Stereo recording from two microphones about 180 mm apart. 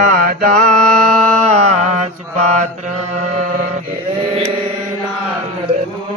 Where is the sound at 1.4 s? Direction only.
40° right (ahead or behind).